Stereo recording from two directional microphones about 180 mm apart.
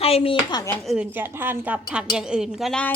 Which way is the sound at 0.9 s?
10° right (ahead or behind).